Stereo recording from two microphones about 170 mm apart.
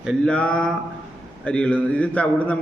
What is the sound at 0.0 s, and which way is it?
A woman's voice, centre (ahead or behind).